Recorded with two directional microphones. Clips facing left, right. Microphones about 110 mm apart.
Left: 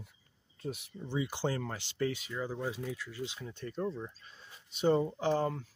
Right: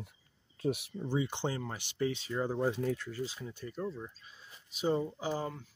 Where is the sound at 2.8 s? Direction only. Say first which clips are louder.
Right 6 dB; 50° right (ahead or behind).